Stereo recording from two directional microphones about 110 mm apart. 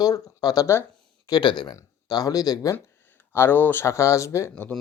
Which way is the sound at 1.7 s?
35° left (ahead or behind).